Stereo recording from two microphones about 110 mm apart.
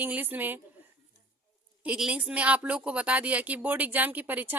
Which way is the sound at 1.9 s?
10° right (ahead or behind).